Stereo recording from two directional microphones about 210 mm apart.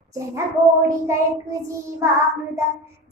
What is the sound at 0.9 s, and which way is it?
Child singing, 15° right (ahead or behind).